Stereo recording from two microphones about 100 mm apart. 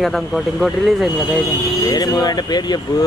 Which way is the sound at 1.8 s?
40° left (ahead or behind).